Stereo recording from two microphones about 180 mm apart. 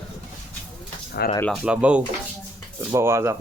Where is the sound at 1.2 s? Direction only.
60° left (ahead or behind).